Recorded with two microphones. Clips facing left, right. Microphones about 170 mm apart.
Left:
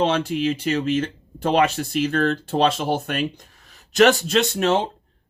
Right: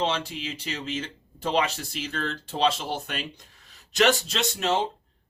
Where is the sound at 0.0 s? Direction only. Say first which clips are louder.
Left 8 dB; 55° left (ahead or behind).